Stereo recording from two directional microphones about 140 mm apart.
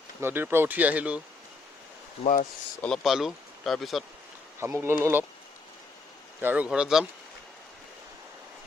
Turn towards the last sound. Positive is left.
turn(degrees=-5)  # may be behind; listen again after turning